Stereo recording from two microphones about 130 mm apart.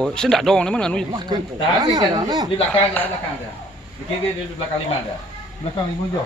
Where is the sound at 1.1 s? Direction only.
35° right (ahead or behind).